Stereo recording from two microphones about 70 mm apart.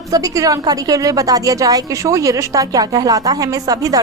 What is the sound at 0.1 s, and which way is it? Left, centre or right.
Speech, right.